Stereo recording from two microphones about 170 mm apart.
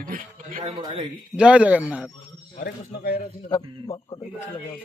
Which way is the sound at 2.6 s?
70° left (ahead or behind).